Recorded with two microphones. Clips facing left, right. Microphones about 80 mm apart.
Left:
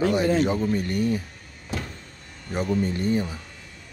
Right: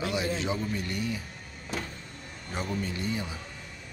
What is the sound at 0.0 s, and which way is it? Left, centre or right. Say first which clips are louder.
Speech: left 9 dB; left.